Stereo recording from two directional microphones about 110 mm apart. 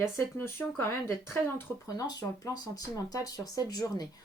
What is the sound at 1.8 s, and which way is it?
Speech, 35° left (ahead or behind).